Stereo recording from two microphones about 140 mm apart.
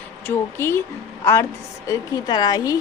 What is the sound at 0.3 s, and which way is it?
A woman's voice, 15° left (ahead or behind).